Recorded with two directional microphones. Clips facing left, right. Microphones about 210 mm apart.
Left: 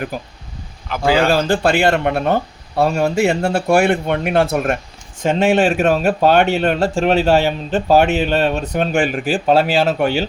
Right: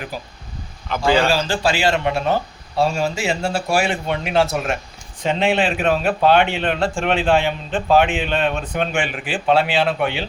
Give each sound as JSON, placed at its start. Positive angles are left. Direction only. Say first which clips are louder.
{"t": 0.1, "sound": "speech", "louder": "left 4 dB", "side_deg": 50}
{"t": 0.9, "sound": "a man's voice", "louder": "left 1 dB", "side_deg": 5}
{"t": 1.3, "sound": "a man's voice", "louder": "left 4 dB", "side_deg": 55}